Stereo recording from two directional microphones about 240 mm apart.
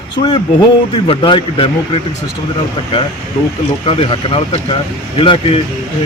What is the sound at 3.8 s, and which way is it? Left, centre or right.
A man's voice, left.